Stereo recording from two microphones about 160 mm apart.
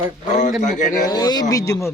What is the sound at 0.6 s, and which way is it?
Speech, 50° left (ahead or behind).